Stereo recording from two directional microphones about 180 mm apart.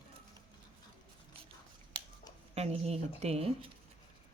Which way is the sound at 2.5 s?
35° right (ahead or behind).